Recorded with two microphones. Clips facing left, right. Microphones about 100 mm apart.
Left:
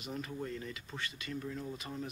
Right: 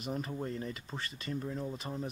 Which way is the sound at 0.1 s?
35° right (ahead or behind).